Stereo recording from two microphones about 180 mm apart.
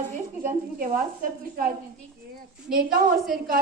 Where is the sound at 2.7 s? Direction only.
50° right (ahead or behind).